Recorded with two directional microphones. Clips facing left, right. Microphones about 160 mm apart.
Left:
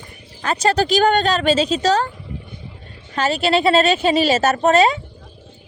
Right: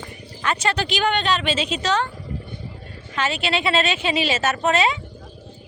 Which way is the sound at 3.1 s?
40° left (ahead or behind).